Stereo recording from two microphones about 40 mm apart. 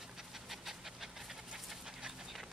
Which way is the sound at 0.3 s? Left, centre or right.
Centre.